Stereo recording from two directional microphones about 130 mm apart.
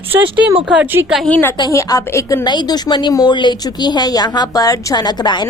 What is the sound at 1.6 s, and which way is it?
A woman's voice, 25° left (ahead or behind).